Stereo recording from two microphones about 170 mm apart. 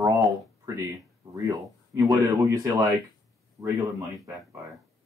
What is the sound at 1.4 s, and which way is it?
Speech, 20° right (ahead or behind).